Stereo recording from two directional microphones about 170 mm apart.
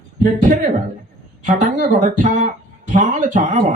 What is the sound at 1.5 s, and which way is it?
Speech, 50° right (ahead or behind).